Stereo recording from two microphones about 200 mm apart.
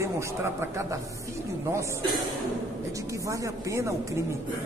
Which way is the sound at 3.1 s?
15° right (ahead or behind).